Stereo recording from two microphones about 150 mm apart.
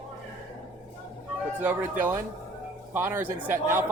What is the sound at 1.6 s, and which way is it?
Speech, 10° right (ahead or behind).